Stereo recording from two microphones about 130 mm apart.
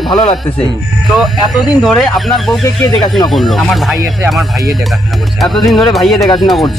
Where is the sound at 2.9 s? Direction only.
35° left (ahead or behind).